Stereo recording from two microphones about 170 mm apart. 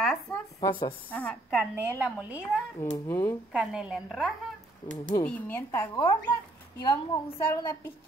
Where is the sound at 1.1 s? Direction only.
10° left (ahead or behind).